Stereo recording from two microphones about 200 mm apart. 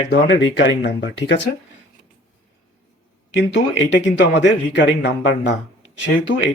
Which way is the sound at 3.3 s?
65° left (ahead or behind).